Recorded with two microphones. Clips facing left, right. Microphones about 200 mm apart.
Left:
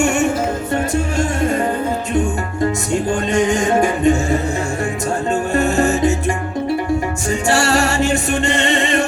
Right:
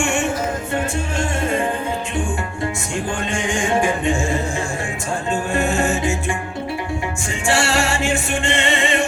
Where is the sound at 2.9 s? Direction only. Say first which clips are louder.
Left 7 dB; 40° left (ahead or behind).